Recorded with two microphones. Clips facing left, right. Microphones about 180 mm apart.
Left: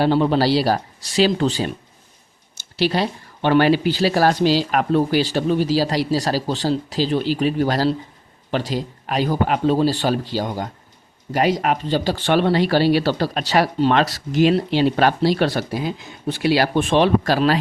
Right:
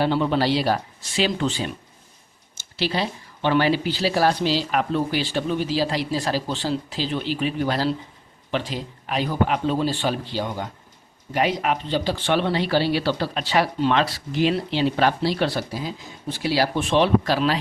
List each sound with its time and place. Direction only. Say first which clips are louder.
0.0 s speech: left 4 dB; 40° left (ahead or behind)